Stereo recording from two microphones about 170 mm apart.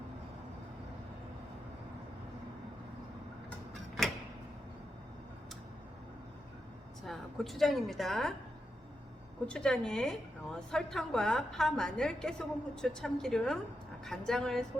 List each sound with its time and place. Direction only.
7.0 s a woman's voice: centre (ahead or behind)
9.5 s a woman's voice: 5° left (ahead or behind)